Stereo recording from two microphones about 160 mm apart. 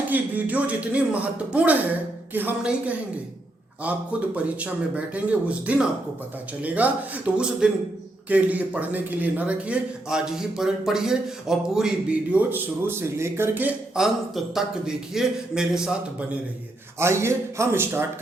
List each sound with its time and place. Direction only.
0.1 s speech: 10° right (ahead or behind)
17.0 s speech: 15° right (ahead or behind)